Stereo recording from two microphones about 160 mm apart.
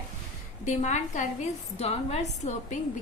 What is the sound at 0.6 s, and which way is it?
A woman's voice, 50° left (ahead or behind).